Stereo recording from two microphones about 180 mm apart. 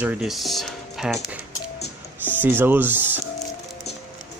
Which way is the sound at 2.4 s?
10° right (ahead or behind).